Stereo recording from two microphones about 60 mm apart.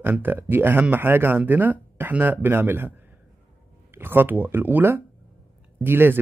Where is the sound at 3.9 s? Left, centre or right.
Right.